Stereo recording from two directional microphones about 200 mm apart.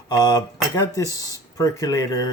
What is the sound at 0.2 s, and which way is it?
Speech, 20° left (ahead or behind).